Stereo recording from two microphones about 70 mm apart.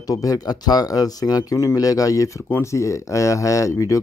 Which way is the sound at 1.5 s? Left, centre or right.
Left.